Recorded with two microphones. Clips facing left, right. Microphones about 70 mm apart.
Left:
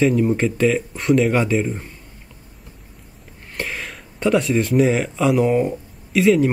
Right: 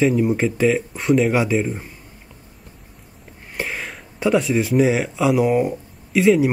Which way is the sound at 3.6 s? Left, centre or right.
Centre.